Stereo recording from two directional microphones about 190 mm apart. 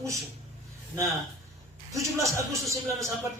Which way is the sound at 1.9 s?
15° right (ahead or behind).